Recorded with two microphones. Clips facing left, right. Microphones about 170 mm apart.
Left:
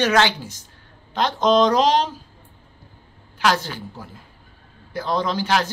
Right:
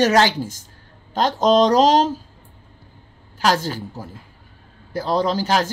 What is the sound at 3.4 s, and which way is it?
A man's voice, 40° right (ahead or behind).